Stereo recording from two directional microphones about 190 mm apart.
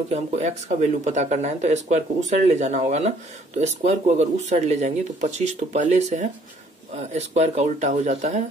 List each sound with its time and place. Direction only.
0.1 s speech: 35° right (ahead or behind)